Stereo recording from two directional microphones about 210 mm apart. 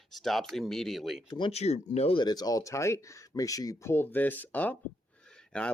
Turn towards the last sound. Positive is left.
turn(degrees=5)  # may be behind; listen again after turning